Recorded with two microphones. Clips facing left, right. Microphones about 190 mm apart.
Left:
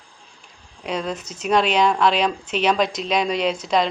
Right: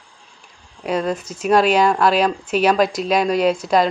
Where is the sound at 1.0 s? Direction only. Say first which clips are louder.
Right 5 dB; 50° right (ahead or behind).